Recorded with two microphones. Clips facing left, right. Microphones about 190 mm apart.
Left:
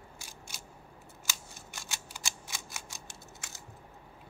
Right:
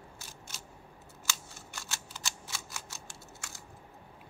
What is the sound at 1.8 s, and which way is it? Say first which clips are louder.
Scissors: even; 15° left (ahead or behind).